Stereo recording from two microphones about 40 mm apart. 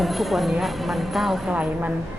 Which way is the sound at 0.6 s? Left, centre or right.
Centre.